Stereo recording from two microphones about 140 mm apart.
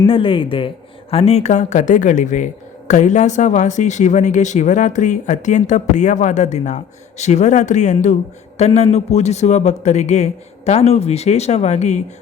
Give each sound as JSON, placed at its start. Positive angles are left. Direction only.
{"t": 0.0, "sound": "a man's voice", "side_deg": 40}